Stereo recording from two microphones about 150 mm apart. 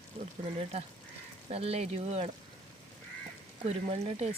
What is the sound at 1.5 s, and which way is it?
Speech, 40° right (ahead or behind).